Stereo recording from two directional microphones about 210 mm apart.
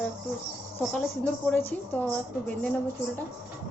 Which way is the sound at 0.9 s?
5° left (ahead or behind).